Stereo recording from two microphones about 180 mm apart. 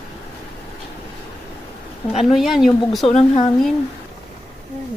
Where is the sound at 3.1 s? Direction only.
35° left (ahead or behind).